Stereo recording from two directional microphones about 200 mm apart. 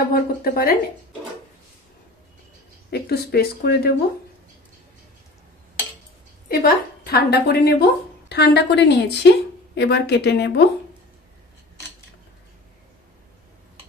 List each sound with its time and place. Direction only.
0.1 s speech: 45° left (ahead or behind)
2.9 s speech: 55° left (ahead or behind)
6.6 s a woman's voice: 50° left (ahead or behind)